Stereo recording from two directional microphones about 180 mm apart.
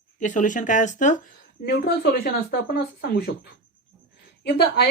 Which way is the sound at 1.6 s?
60° left (ahead or behind).